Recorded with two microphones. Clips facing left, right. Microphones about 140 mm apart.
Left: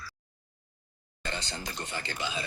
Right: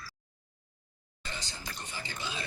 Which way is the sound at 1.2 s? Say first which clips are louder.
Left 6 dB; 70° left (ahead or behind).